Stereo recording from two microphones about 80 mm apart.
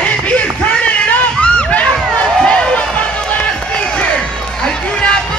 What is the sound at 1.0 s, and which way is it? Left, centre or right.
Run, centre.